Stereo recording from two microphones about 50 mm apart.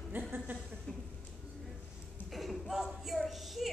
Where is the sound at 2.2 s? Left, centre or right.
Centre.